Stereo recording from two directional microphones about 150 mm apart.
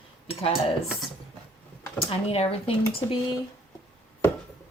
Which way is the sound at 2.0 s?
40° left (ahead or behind).